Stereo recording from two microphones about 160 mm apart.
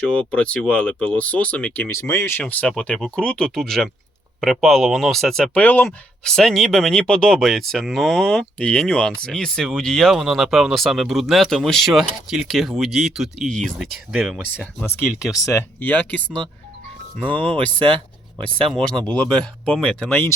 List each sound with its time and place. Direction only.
0.1 s speech: 5° left (ahead or behind)
14.1 s speech: 5° right (ahead or behind)
14.5 s speech: 10° left (ahead or behind)
15.0 s speech: 5° right (ahead or behind)
15.4 s speech: 15° left (ahead or behind)
17.2 s speech: 30° right (ahead or behind)
17.8 s a sound: 35° right (ahead or behind)
18.7 s speech: 5° left (ahead or behind)